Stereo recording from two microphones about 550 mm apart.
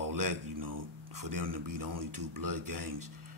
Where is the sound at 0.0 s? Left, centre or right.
Right.